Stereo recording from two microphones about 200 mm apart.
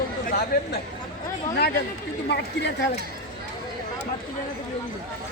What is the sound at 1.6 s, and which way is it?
Speech, 55° left (ahead or behind).